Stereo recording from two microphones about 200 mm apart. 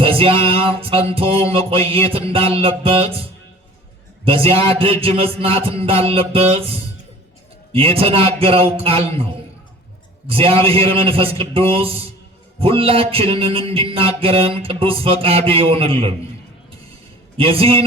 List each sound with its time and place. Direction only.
0.0 s music: 25° right (ahead or behind)
4.3 s music: 30° right (ahead or behind)
10.2 s music: 30° right (ahead or behind)
17.3 s music: 30° right (ahead or behind)